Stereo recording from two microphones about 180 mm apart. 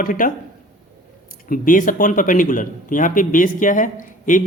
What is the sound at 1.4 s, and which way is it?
Speech, 50° left (ahead or behind).